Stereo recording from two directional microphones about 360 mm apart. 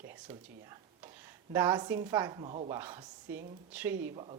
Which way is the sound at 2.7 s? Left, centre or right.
Centre.